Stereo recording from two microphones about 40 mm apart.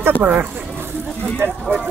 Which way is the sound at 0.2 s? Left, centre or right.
Right.